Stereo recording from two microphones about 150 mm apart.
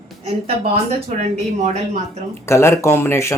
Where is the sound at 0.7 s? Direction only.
45° right (ahead or behind).